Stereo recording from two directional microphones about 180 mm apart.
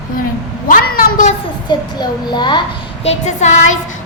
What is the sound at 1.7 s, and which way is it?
Speech, 25° left (ahead or behind).